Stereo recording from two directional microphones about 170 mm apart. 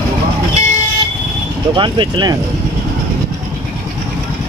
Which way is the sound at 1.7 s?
30° right (ahead or behind).